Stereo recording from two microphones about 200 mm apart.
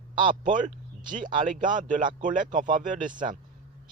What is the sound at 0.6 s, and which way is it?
Speech, 40° right (ahead or behind).